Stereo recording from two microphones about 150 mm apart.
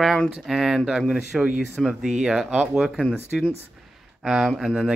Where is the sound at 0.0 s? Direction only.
Centre (ahead or behind).